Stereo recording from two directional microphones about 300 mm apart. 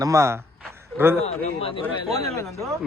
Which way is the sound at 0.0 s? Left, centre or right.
Centre.